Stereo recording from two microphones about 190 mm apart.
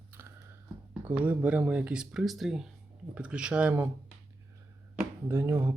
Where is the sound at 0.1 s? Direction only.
10° right (ahead or behind).